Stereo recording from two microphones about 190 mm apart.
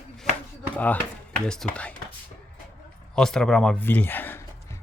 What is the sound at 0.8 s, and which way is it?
Speech, 10° left (ahead or behind).